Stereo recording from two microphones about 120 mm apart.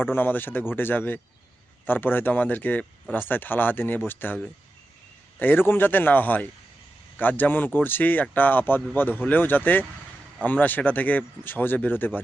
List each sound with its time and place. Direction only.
0.0 s speech: 15° left (ahead or behind)
5.4 s speech: 15° left (ahead or behind)